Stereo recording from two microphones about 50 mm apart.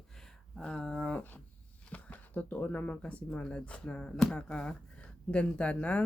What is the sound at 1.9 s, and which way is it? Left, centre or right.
Speech, left.